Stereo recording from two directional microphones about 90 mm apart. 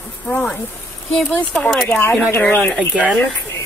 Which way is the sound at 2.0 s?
25° left (ahead or behind).